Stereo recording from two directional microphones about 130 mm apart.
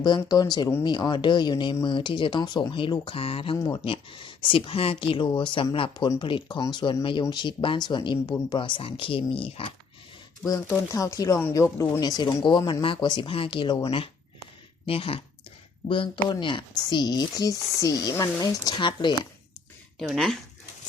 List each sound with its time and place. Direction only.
0.2 s speech: 30° left (ahead or behind)
10.9 s speech: 25° left (ahead or behind)
14.8 s speech: 45° left (ahead or behind)
20.0 s speech: centre (ahead or behind)